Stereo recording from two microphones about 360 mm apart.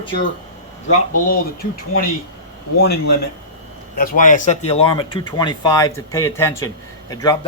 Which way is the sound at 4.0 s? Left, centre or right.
Left.